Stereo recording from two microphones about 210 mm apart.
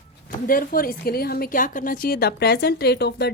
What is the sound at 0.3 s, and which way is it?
A woman's voice, 40° left (ahead or behind).